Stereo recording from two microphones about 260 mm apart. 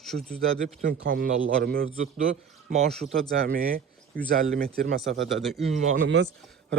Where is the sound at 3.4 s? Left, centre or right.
Right.